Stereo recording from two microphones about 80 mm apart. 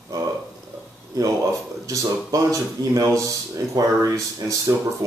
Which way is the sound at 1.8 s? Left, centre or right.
Right.